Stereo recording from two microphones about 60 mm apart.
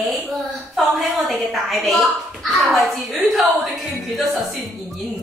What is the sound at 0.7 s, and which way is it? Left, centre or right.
Speech, centre.